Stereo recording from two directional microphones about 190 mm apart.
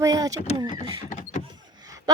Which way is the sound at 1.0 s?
40° left (ahead or behind).